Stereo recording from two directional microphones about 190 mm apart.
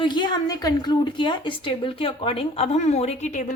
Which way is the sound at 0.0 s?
25° left (ahead or behind).